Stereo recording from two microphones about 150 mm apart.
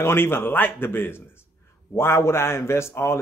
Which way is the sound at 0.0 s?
15° left (ahead or behind).